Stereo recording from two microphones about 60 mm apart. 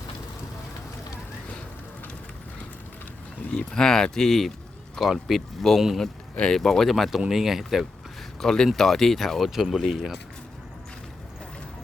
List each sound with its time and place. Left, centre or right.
3.5 s speech: centre
6.3 s speech: centre
6.6 s speech: centre
8.4 s speech: centre